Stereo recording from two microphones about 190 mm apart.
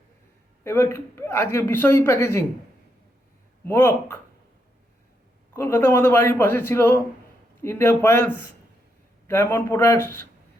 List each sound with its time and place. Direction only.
0.6 s speech: 15° left (ahead or behind)
3.7 s speech: 15° left (ahead or behind)
5.5 s speech: 15° left (ahead or behind)